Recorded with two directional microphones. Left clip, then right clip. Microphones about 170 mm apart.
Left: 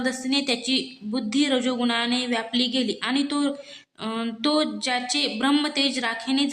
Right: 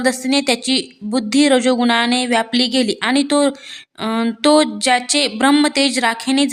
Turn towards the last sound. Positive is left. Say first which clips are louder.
# right 8 dB
turn(degrees=-50)  # may be behind; listen again after turning